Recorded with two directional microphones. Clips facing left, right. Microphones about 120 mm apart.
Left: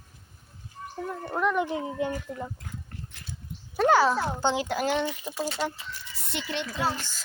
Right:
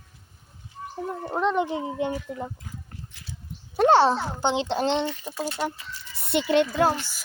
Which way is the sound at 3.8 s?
30° right (ahead or behind).